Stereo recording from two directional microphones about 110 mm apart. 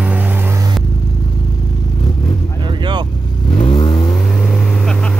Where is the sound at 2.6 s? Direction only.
45° right (ahead or behind).